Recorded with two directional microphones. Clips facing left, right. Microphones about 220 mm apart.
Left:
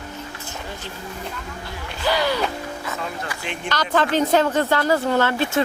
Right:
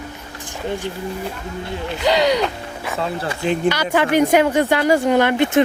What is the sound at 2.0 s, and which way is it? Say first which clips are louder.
Speech: right 5 dB; 20° right (ahead or behind).